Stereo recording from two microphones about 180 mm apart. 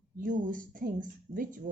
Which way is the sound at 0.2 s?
50° right (ahead or behind).